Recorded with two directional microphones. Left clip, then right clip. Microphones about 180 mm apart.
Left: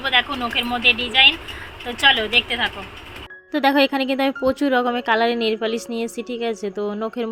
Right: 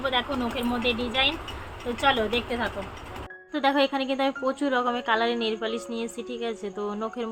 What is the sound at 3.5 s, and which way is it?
Speech, 40° left (ahead or behind).